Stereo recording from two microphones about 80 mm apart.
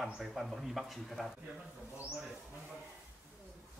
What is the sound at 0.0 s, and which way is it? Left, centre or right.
Speech, centre.